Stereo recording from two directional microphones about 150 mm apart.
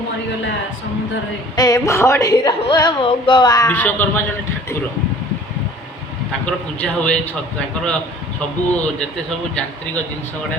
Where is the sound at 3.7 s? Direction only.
10° left (ahead or behind).